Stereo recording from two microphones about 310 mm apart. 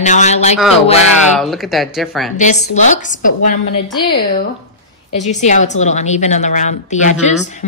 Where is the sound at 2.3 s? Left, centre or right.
Left.